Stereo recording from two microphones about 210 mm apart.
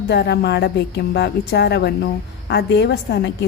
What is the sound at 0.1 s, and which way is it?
A woman's voice, 50° left (ahead or behind).